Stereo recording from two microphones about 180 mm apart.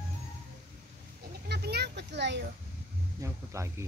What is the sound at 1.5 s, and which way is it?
Speech, 65° right (ahead or behind).